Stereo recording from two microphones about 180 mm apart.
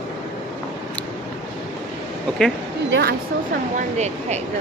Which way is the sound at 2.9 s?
65° right (ahead or behind).